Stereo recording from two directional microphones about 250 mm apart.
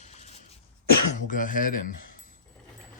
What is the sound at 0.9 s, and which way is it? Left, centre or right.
Speech, left.